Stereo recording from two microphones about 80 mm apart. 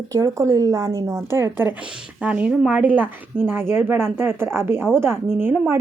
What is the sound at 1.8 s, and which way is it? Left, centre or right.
Speech, centre.